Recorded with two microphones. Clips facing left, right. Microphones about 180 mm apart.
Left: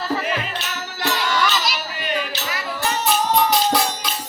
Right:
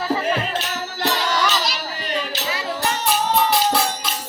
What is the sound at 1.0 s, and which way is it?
Music, 40° right (ahead or behind).